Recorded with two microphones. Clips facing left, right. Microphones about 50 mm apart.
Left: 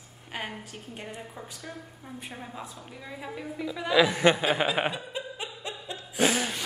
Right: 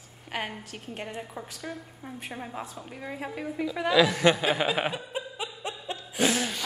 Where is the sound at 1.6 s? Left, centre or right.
Centre.